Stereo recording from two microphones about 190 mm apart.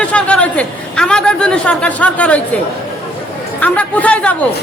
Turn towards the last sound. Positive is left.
turn(degrees=10)  # may be behind; listen again after turning